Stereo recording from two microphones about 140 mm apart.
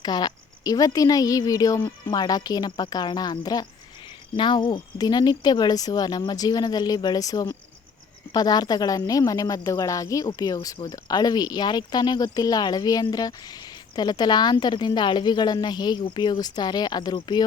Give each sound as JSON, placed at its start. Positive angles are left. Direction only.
{"t": 0.0, "sound": "speech", "side_deg": 30}